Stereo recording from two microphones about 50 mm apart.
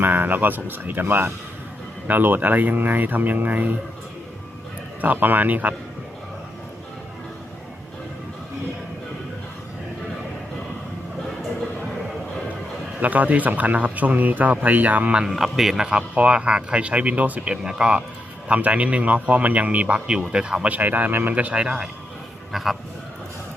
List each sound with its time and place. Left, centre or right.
0.0 s speech: right
4.9 s speech: right
13.0 s speech: right
15.3 s a man's voice: centre
15.9 s speech: right
17.5 s speech: centre
20.1 s speech: centre
20.7 s speech: right
21.3 s speech: right
22.5 s a man's voice: centre